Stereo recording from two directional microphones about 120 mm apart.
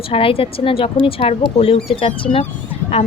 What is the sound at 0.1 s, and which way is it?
Speech, 50° left (ahead or behind).